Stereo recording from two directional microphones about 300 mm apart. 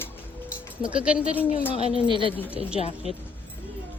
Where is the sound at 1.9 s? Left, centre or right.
Centre.